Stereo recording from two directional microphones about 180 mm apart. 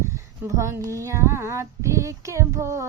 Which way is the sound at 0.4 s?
15° right (ahead or behind).